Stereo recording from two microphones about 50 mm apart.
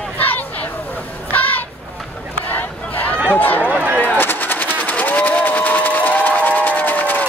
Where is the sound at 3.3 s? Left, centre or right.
Left.